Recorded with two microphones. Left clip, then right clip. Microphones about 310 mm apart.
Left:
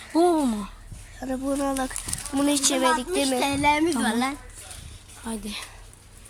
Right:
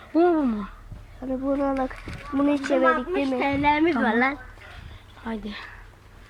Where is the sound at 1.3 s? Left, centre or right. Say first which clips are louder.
Right 2 dB; left.